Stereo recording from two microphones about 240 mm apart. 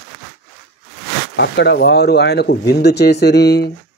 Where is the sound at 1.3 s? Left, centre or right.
Left.